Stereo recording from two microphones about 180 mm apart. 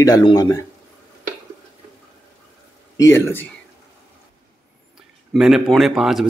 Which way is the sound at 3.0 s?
15° left (ahead or behind).